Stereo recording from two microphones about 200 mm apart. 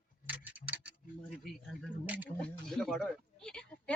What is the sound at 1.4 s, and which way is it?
Speech, 5° right (ahead or behind).